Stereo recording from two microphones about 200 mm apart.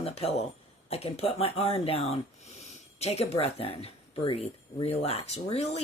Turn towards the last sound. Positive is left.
turn(degrees=30)  # may be behind; listen again after turning